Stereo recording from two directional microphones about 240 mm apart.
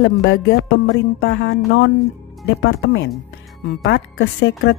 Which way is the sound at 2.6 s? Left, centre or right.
Left.